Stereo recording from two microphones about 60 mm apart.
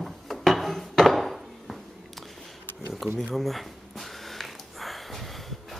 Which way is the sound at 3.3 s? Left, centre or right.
Centre.